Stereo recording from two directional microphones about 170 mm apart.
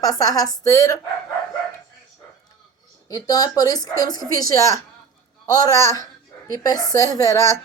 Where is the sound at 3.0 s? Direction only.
20° left (ahead or behind).